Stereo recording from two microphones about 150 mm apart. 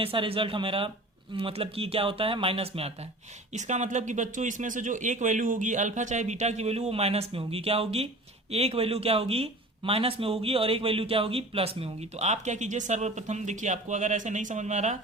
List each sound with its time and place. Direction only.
0.0 s speech: 40° right (ahead or behind); by 14.9 s 55° right (ahead or behind)